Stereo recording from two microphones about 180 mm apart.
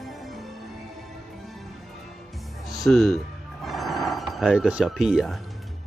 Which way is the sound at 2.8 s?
Centre (ahead or behind).